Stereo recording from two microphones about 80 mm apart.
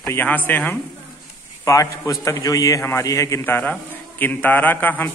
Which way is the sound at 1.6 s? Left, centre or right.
Left.